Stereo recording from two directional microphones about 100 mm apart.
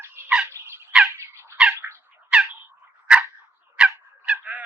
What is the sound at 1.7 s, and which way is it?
Squawk, 25° right (ahead or behind).